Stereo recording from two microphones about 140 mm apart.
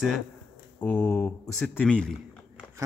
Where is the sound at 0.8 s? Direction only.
10° left (ahead or behind).